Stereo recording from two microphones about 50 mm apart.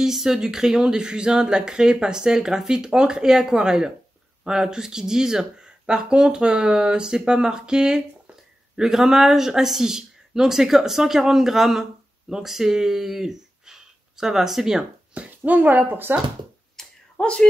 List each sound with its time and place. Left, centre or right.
0.0 s speech: centre
15.1 s speech: right
16.7 s finger snapping: centre